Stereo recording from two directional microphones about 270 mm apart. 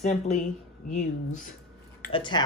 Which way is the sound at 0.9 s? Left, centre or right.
Left.